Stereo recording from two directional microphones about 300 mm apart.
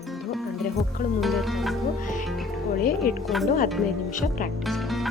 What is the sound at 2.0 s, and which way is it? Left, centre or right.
Music, left.